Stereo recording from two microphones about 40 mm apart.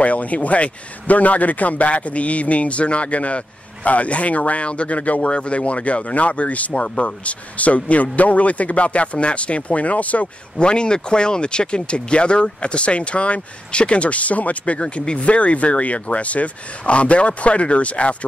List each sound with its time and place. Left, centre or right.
0.0 s speech: left
10.6 s speech: left